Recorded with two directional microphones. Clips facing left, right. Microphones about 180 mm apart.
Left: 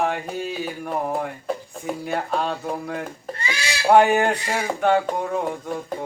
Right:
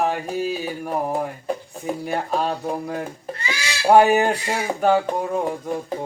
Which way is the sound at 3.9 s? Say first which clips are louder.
Right 1 dB; 10° right (ahead or behind).